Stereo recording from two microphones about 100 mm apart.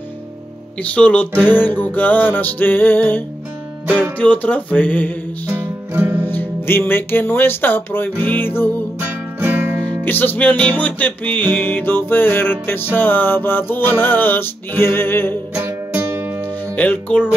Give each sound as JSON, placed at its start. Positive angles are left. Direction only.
{"t": 0.9, "sound": "music", "side_deg": 15}
{"t": 5.5, "sound": "music", "side_deg": -20}
{"t": 6.2, "sound": "music", "side_deg": 20}
{"t": 9.0, "sound": "music", "side_deg": -20}
{"t": 10.0, "sound": "music", "side_deg": 20}
{"t": 15.5, "sound": "music", "side_deg": -20}
{"t": 16.7, "sound": "music", "side_deg": 15}